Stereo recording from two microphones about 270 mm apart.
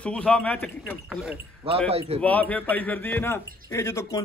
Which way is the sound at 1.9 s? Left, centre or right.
Right.